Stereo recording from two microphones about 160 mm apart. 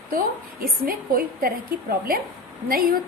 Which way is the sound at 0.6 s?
65° right (ahead or behind).